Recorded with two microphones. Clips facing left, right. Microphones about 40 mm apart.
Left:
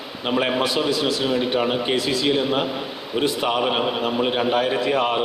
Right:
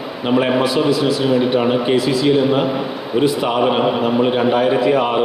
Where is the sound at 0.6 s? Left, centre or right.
Left.